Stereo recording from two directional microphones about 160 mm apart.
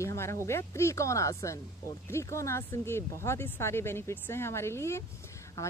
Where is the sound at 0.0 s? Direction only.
15° left (ahead or behind).